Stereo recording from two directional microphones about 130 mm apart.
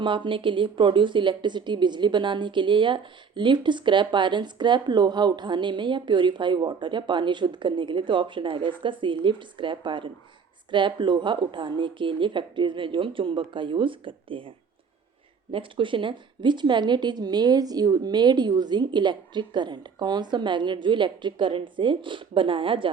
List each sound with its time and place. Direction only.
0.3 s a woman's voice: 40° right (ahead or behind)
15.5 s a woman's voice: 40° right (ahead or behind)